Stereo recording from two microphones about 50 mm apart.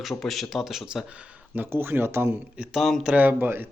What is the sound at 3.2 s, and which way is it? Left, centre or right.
Speech, right.